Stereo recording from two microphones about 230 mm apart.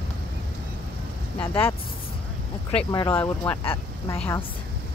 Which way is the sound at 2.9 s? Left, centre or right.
Centre.